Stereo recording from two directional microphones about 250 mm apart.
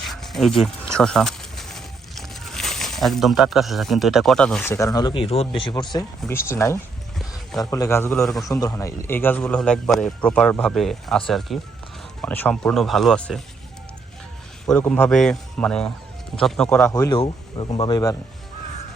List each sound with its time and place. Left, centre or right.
0.0 s dog: centre
0.6 s speech: centre
8.4 s a man's voice: centre
14.7 s a man's voice: centre
16.9 s speech: centre